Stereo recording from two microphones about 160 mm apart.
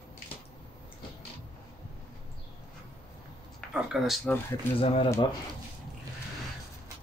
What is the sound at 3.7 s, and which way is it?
Speech, centre (ahead or behind).